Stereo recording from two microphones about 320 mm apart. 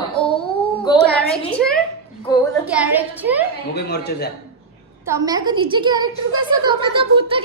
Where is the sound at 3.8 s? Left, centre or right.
Left.